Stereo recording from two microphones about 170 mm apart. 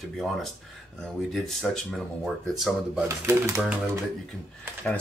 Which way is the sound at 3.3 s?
15° right (ahead or behind).